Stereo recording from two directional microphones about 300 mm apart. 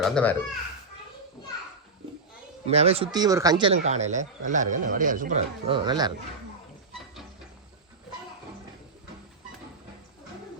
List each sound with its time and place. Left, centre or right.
0.0 s a child's voice: centre
2.6 s speech: right